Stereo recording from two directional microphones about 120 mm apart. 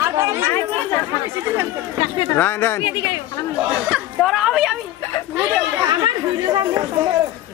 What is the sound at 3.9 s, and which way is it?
Speech, 5° right (ahead or behind).